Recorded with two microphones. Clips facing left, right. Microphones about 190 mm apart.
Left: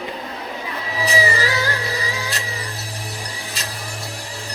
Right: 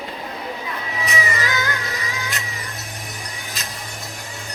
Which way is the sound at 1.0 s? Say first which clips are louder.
Left 5 dB; 30° left (ahead or behind).